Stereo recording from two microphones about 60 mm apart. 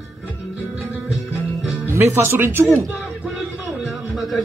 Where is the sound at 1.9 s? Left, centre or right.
Right.